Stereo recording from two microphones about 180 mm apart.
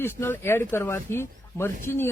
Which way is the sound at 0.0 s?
10° left (ahead or behind).